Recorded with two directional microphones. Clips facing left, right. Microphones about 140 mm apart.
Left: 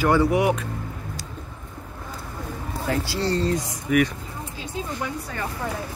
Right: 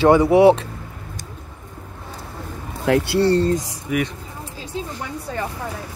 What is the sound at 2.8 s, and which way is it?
Speech, 65° right (ahead or behind).